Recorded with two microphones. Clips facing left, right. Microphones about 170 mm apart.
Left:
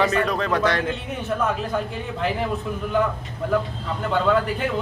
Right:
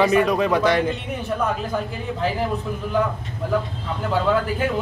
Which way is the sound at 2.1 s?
Centre (ahead or behind).